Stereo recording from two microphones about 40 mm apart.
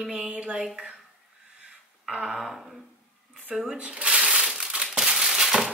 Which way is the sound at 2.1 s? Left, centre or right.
Centre.